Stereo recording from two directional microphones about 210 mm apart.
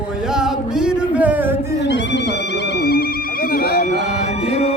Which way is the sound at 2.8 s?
45° left (ahead or behind).